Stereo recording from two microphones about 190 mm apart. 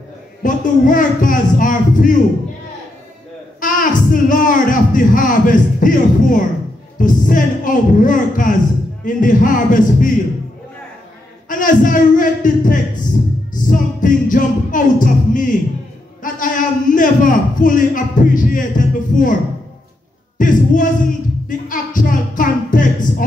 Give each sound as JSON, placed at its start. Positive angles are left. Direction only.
{"t": 0.4, "sound": "a man's voice", "side_deg": 45}
{"t": 3.6, "sound": "a man's voice", "side_deg": 45}
{"t": 11.4, "sound": "a man's voice", "side_deg": 45}
{"t": 13.5, "sound": "music", "side_deg": 45}
{"t": 16.2, "sound": "a man's voice", "side_deg": 45}
{"t": 20.3, "sound": "a sound", "side_deg": 45}